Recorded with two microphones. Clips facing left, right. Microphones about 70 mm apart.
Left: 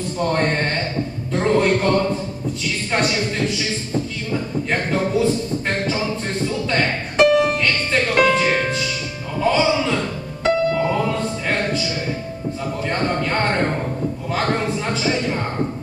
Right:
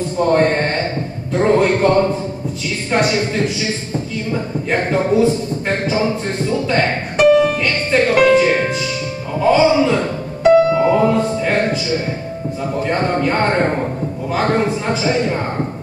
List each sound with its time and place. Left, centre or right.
0.2 s speech: centre
2.9 s speech: centre
7.2 s music: centre
7.6 s music: centre
9.4 s speech: centre
10.7 s music: centre
12.8 s speech: centre